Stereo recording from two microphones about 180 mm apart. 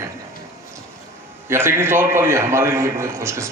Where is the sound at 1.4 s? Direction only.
15° right (ahead or behind).